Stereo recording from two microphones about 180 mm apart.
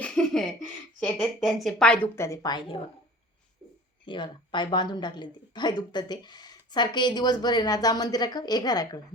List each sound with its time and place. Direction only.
0.0 s a sound: 5° left (ahead or behind)
0.9 s a woman's voice: 5° left (ahead or behind); by 2.8 s 30° left (ahead or behind)
4.0 s a woman's voice: 25° left (ahead or behind)